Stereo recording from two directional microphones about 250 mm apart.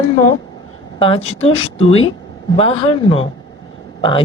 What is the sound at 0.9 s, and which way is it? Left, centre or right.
Speech, left.